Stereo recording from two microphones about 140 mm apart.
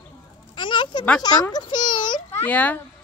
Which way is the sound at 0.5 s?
35° left (ahead or behind).